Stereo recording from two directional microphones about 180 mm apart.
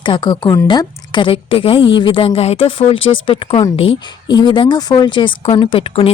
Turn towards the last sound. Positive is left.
turn(degrees=30)  # may be behind; listen again after turning